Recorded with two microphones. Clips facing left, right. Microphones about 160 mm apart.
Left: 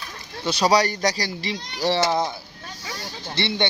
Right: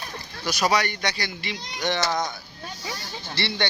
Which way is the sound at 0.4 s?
30° left (ahead or behind).